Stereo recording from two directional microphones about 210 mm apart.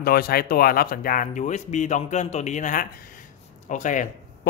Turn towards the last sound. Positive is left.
turn(degrees=35)  # may be behind; listen again after turning